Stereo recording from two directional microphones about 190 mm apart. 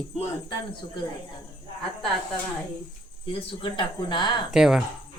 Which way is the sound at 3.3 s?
25° left (ahead or behind).